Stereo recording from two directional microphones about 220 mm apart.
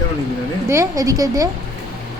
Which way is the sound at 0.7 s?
15° right (ahead or behind).